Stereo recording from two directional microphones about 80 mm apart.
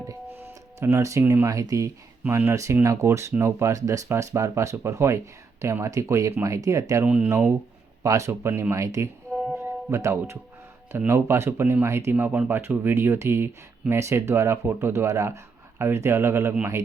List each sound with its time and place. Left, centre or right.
0.3 s music: right
1.5 s speech: right
7.0 s speech: centre
7.3 s speech: right
9.6 s music: right
10.9 s speech: right